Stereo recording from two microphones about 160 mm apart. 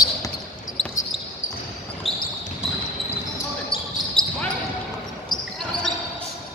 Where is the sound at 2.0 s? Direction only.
Centre (ahead or behind).